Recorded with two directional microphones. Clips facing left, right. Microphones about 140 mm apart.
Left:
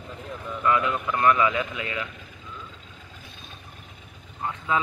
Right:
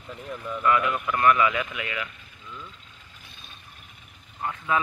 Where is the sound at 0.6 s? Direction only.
25° left (ahead or behind).